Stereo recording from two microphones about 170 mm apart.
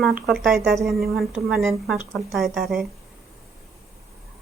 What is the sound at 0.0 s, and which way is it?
A woman's voice, centre (ahead or behind).